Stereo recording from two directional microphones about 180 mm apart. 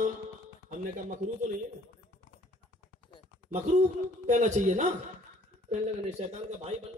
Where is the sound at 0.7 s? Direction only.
50° right (ahead or behind).